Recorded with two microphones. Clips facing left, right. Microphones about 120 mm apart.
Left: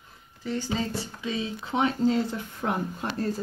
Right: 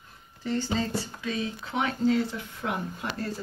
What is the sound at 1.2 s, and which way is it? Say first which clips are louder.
Speech: left 1 dB; 20° left (ahead or behind).